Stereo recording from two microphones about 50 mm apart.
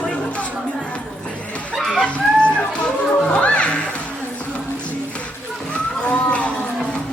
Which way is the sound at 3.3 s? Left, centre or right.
Left.